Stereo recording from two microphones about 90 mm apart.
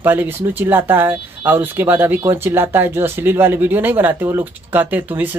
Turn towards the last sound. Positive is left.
turn(degrees=-20)  # may be behind; listen again after turning